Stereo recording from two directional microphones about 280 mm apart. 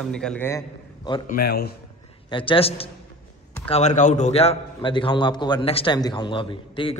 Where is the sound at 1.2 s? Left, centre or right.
Left.